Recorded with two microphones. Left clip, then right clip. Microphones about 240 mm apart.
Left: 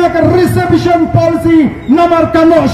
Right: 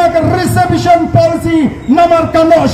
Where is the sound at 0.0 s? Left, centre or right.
Right.